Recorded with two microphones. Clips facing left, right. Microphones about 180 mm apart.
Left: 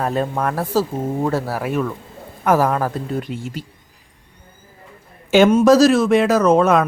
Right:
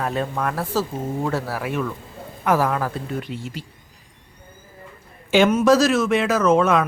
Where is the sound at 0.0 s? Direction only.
40° left (ahead or behind).